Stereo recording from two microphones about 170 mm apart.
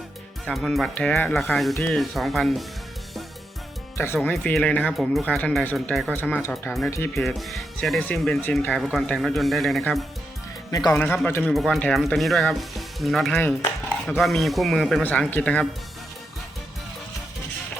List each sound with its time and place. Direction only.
0.4 s speech: centre (ahead or behind)
3.9 s speech: 15° left (ahead or behind)
6.1 s speech: 10° left (ahead or behind)
10.9 s speech: 10° left (ahead or behind)